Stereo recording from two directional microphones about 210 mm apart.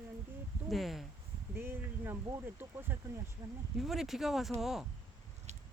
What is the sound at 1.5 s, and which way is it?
Speech, 10° right (ahead or behind).